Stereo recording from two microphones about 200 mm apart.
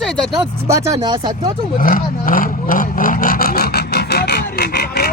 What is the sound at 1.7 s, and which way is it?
Rub, 45° left (ahead or behind).